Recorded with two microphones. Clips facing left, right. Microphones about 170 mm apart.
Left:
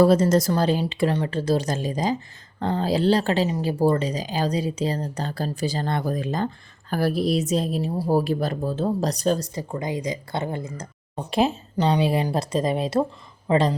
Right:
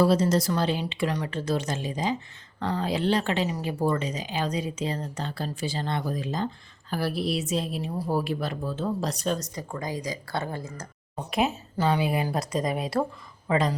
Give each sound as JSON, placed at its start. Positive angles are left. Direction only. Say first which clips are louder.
{"t": 0.0, "sound": "speech", "louder": "left 5 dB", "side_deg": 50}
{"t": 9.6, "sound": "speech", "louder": "left 4 dB", "side_deg": 20}
{"t": 11.3, "sound": "speech", "louder": "left 4 dB", "side_deg": 30}